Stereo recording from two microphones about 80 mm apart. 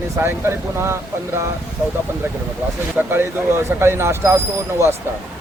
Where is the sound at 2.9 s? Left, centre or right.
Right.